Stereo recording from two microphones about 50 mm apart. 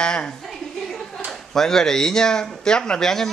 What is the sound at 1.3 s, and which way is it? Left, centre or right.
Speech, centre.